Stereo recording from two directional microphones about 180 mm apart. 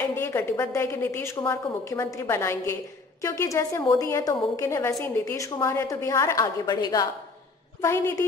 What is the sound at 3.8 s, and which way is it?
Speech, 25° left (ahead or behind).